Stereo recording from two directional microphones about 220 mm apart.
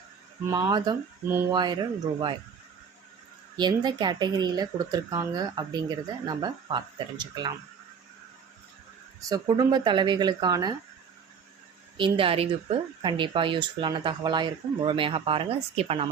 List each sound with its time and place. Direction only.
0.5 s speech: 15° right (ahead or behind)
3.6 s speech: 20° right (ahead or behind)
9.3 s speech: 20° right (ahead or behind)
11.9 s speech: 20° right (ahead or behind)